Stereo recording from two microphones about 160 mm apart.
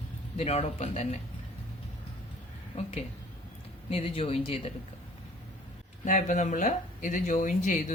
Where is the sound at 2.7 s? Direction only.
40° left (ahead or behind).